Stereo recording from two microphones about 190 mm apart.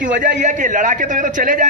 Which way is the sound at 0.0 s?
40° right (ahead or behind).